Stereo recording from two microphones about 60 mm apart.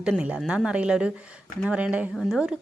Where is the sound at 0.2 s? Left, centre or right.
Centre.